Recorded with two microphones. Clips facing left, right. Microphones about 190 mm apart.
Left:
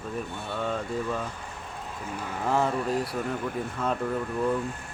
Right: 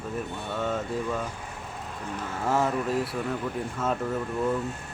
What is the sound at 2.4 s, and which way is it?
Speech, centre (ahead or behind).